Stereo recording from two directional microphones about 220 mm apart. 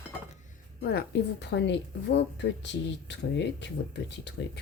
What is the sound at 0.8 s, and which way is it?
A woman's voice, 50° left (ahead or behind).